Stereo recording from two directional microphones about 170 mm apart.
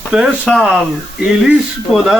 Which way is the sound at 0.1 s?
5° right (ahead or behind).